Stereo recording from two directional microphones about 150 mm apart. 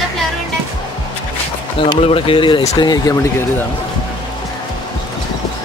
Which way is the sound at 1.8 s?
35° left (ahead or behind).